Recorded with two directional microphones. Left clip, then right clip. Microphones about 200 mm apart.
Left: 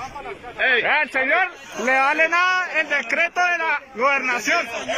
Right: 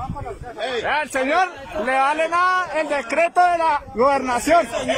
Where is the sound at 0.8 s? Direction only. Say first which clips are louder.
Left 2 dB; 10° right (ahead or behind).